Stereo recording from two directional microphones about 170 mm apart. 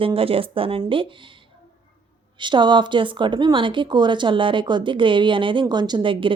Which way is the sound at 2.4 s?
25° right (ahead or behind).